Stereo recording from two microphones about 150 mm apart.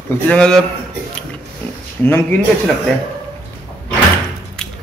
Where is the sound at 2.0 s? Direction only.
15° left (ahead or behind).